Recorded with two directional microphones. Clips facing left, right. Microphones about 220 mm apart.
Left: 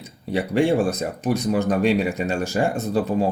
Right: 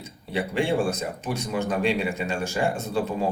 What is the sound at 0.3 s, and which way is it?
Speech, 40° left (ahead or behind).